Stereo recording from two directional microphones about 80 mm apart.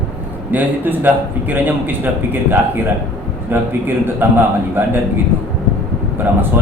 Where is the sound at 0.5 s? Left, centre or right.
Right.